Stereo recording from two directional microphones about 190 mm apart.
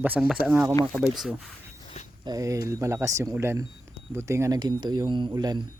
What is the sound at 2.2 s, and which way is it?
Speech, 20° right (ahead or behind).